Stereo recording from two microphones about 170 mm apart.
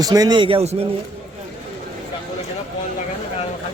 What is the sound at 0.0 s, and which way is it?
Speech, 20° right (ahead or behind).